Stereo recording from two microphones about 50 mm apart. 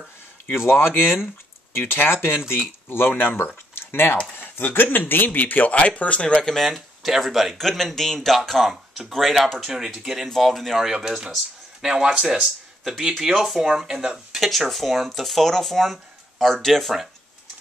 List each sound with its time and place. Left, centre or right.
0.7 s speech: left; by 6.6 s centre
6.6 s speech: centre
9.7 s speech: centre
10.9 s speech: centre
12.4 s speech: centre
14.3 s speech: centre